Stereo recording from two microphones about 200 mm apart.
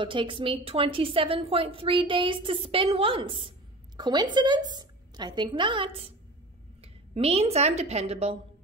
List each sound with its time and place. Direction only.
0.0 s a woman's voice: 25° right (ahead or behind)